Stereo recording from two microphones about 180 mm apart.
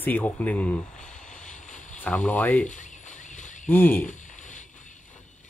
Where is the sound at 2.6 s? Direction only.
45° left (ahead or behind).